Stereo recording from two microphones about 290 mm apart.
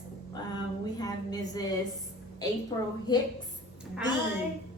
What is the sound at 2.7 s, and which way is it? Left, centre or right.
Speech, centre.